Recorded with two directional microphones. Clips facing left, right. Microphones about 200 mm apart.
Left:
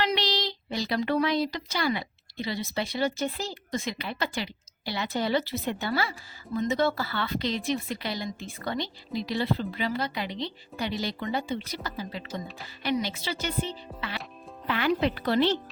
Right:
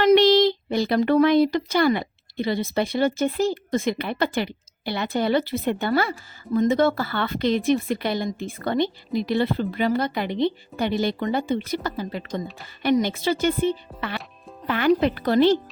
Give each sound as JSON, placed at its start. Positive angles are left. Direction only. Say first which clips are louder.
{"t": 0.0, "sound": "speech", "louder": "right 13 dB", "side_deg": -50}